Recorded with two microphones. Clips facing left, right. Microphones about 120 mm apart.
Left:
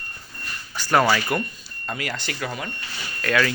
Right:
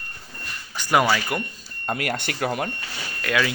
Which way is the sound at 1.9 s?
55° right (ahead or behind).